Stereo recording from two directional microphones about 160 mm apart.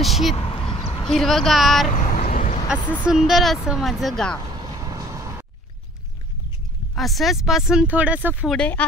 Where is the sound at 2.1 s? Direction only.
60° left (ahead or behind).